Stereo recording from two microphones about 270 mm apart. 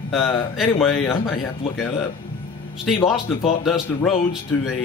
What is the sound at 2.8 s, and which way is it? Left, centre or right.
Speech, centre.